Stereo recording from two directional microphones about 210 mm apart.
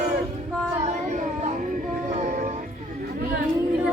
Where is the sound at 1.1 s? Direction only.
35° right (ahead or behind).